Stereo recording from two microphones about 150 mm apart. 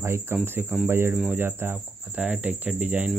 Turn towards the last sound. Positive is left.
turn(degrees=-10)  # may be behind; listen again after turning